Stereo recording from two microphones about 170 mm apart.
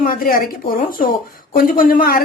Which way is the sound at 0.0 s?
55° left (ahead or behind).